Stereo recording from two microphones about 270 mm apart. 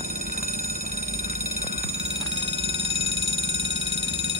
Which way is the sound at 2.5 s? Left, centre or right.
Right.